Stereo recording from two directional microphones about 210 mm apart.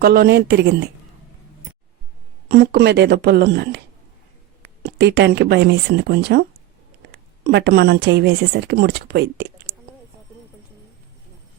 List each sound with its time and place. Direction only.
0.0 s speech: 45° right (ahead or behind)
2.5 s speech: 50° right (ahead or behind)
4.8 s speech: 55° right (ahead or behind)
7.4 s speech: 50° right (ahead or behind)